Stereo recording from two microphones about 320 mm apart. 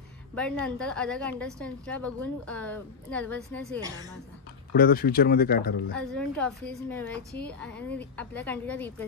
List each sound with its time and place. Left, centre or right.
0.3 s a woman's voice: centre
4.7 s speech: left
5.9 s a woman's voice: centre